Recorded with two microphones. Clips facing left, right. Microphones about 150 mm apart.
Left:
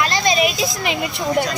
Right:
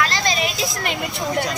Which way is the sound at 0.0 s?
15° left (ahead or behind).